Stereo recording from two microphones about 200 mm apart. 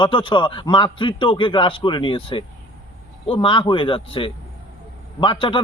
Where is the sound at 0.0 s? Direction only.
25° left (ahead or behind).